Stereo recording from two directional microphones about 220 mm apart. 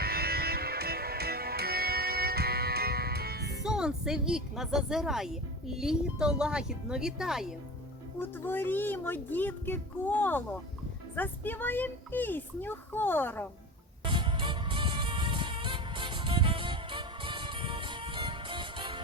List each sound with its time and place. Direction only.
0.0 s music: 45° right (ahead or behind)
3.6 s a woman's voice: 5° right (ahead or behind)
8.2 s speech: 10° left (ahead or behind)
14.0 s music: 20° right (ahead or behind)